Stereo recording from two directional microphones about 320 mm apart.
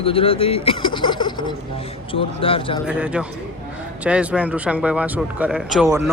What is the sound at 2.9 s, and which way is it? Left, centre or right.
Speech, centre.